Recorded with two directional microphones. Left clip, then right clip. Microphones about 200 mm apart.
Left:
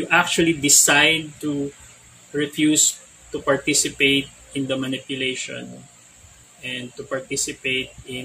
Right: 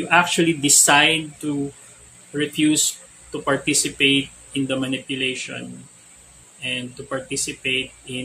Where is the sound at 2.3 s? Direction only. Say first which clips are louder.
Even; 15° right (ahead or behind).